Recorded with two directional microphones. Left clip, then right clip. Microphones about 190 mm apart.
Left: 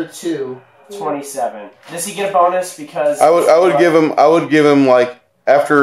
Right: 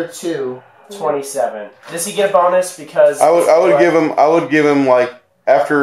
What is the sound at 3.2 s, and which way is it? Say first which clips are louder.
Speech: left 5 dB; 40° left (ahead or behind).